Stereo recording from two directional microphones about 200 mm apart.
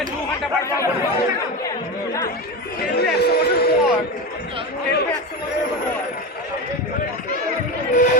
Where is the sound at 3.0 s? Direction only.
55° left (ahead or behind).